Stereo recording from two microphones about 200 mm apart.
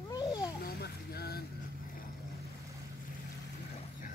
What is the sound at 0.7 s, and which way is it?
Vehicle, 50° left (ahead or behind).